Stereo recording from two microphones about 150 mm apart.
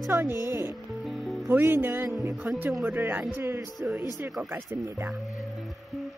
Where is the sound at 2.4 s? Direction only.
5° right (ahead or behind).